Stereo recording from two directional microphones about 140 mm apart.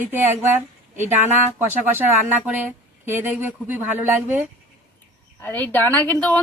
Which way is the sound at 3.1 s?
15° right (ahead or behind).